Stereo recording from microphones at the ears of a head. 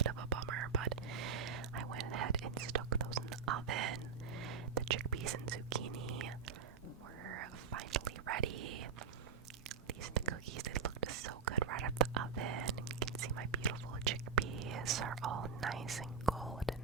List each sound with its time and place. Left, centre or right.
0.0 s whispering: right
16.3 s whispering: centre